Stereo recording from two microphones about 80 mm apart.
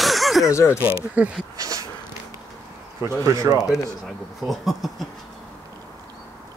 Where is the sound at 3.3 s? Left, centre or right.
Right.